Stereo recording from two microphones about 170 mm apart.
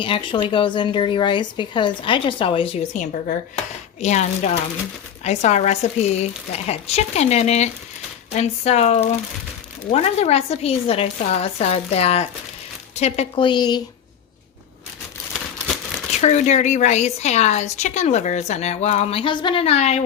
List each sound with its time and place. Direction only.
0.0 s speech: 30° left (ahead or behind)
2.9 s a woman's voice: 50° left (ahead or behind); by 13.8 s 25° left (ahead or behind)
15.3 s crumpling: 5° right (ahead or behind)
16.2 s a woman's voice: 45° left (ahead or behind)